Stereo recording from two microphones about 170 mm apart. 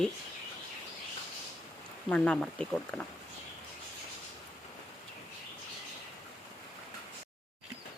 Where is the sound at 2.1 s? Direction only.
5° left (ahead or behind).